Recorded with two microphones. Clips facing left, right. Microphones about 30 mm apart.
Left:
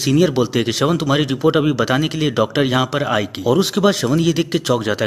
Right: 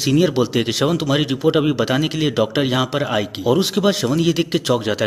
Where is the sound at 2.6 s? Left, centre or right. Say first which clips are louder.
Left 2 dB; centre.